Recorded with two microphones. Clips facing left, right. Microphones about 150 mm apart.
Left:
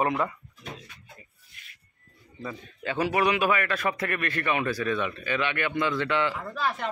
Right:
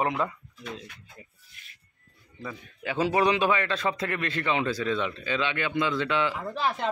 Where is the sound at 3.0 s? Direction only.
25° right (ahead or behind).